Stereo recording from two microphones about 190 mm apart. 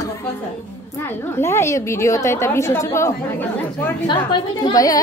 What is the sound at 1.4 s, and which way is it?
A woman's voice, 15° left (ahead or behind).